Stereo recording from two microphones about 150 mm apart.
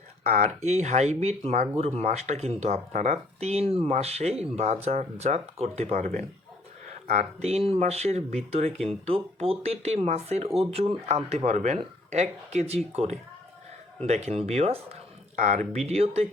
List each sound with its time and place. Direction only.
0.3 s speech: 50° right (ahead or behind)
15.9 s speech: 45° right (ahead or behind)